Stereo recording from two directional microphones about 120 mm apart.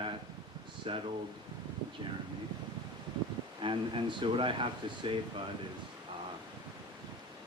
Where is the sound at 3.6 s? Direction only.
45° right (ahead or behind).